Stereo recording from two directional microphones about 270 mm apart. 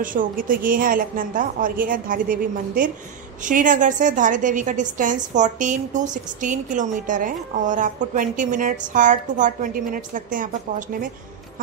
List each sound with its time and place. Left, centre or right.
0.0 s a woman's voice: right